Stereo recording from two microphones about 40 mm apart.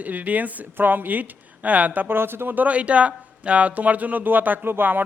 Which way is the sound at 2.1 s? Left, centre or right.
Right.